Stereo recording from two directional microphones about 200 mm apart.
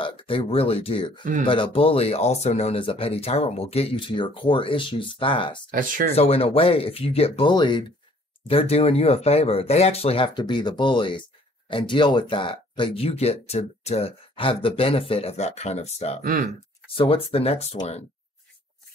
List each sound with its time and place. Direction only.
0.0 s speech: 25° left (ahead or behind)
5.7 s speech: 45° right (ahead or behind)
6.1 s speech: 30° left (ahead or behind)
16.2 s speech: 40° right (ahead or behind)
16.9 s speech: 30° left (ahead or behind)